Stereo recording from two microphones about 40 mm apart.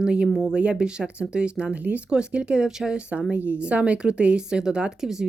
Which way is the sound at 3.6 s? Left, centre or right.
Right.